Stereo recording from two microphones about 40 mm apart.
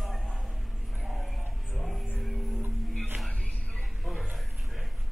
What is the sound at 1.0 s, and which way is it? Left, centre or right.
Music, centre.